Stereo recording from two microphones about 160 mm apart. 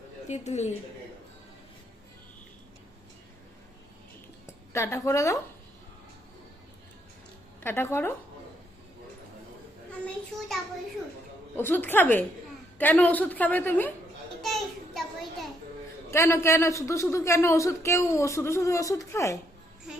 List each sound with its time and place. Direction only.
0.3 s a woman's voice: 45° left (ahead or behind)
4.4 s a woman's voice: 15° left (ahead or behind)
7.6 s a man's voice: 15° left (ahead or behind)
11.5 s a man's voice: 15° left (ahead or behind)
14.4 s a sound: centre (ahead or behind)
16.1 s a man's voice: 15° left (ahead or behind)